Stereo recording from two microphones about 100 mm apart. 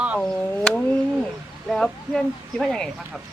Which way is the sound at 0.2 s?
15° left (ahead or behind).